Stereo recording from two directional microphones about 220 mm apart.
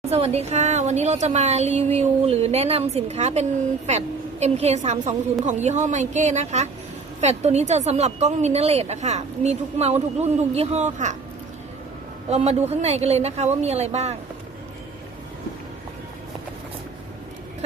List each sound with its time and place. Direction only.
0.1 s a woman's voice: 30° right (ahead or behind)
12.3 s speech: 30° right (ahead or behind)